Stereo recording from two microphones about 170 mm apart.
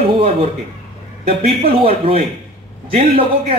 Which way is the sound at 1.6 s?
35° right (ahead or behind).